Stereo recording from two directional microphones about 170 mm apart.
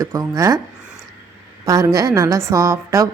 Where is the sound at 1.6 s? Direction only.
20° right (ahead or behind).